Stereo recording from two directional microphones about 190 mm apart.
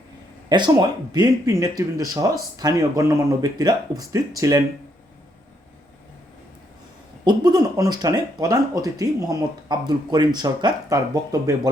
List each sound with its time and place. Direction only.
0.4 s speech: 20° right (ahead or behind)
7.3 s speech: 20° right (ahead or behind)